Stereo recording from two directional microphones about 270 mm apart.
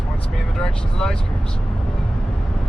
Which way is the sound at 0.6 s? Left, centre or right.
Centre.